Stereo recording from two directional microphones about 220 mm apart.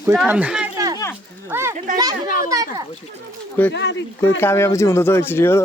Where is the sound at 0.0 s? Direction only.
10° right (ahead or behind).